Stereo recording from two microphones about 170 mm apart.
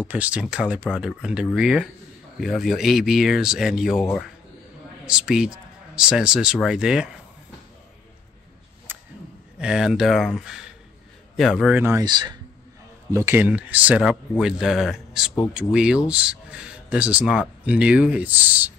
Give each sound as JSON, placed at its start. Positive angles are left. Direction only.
{"t": 0.1, "sound": "speech", "side_deg": -10}
{"t": 5.0, "sound": "a man's voice", "side_deg": -5}
{"t": 8.9, "sound": "a sound", "side_deg": -10}
{"t": 9.6, "sound": "speech", "side_deg": -5}
{"t": 11.8, "sound": "speech", "side_deg": -20}
{"t": 13.1, "sound": "speech", "side_deg": -15}